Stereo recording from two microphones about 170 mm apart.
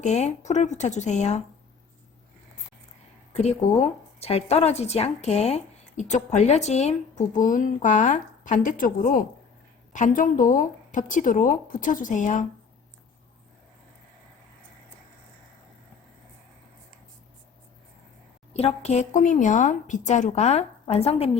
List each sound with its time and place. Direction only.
0.0 s speech: 40° left (ahead or behind)
3.3 s speech: 40° left (ahead or behind)
18.5 s speech: 40° left (ahead or behind)